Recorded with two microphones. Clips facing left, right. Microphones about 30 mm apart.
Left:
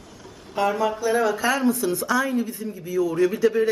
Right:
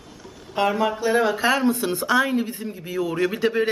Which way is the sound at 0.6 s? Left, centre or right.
Right.